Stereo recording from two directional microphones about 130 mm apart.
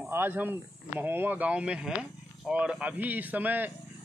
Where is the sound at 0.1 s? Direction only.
15° right (ahead or behind).